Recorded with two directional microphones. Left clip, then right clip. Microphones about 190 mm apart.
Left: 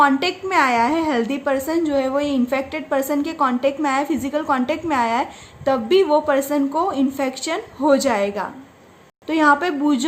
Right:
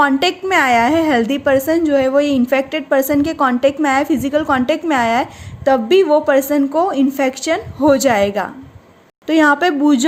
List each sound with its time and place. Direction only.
0.0 s a woman's voice: 35° right (ahead or behind)